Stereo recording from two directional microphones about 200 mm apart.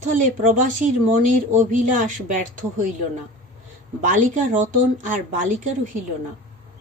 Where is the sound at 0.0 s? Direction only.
40° right (ahead or behind).